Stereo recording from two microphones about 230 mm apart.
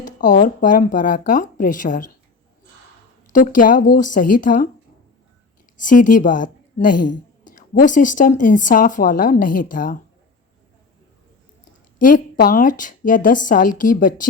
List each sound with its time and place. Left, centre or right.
0.0 s speech: left
3.3 s speech: left
5.7 s a woman's voice: left
6.9 s a woman's voice: left
7.4 s speech: left
11.9 s speech: left